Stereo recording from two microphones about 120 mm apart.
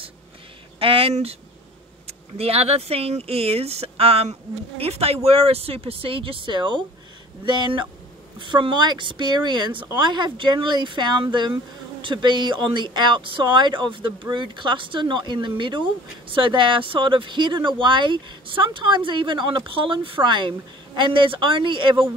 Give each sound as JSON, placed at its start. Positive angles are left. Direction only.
{"t": 0.7, "sound": "speech", "side_deg": -50}